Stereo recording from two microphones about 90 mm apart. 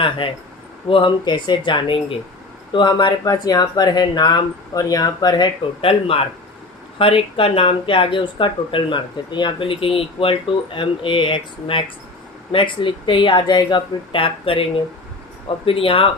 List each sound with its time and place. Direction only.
0.2 s speech: 65° left (ahead or behind)
0.9 s speech: 80° left
1.2 s speech: 55° left (ahead or behind)
3.2 s speech: 45° left (ahead or behind)
5.8 s speech: 90° left